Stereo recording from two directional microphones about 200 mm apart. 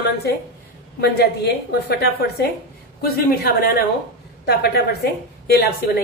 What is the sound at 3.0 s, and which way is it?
A woman's voice, 50° left (ahead or behind).